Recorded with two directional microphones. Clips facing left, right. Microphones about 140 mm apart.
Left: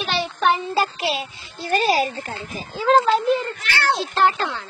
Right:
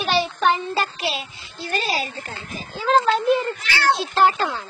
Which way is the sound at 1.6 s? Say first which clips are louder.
Left 6 dB; 45° left (ahead or behind).